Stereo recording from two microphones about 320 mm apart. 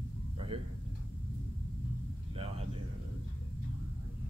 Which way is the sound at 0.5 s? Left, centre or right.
Centre.